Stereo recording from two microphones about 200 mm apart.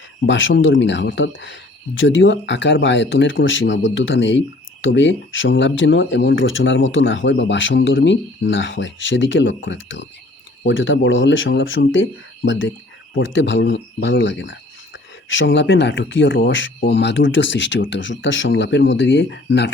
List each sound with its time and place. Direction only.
0.3 s speech: 70° left (ahead or behind)